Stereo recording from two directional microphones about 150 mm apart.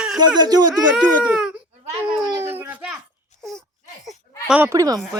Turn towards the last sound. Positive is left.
turn(degrees=-25)  # may be behind; listen again after turning